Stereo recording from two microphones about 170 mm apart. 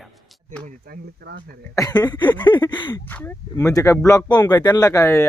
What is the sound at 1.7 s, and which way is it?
Speech, 20° left (ahead or behind).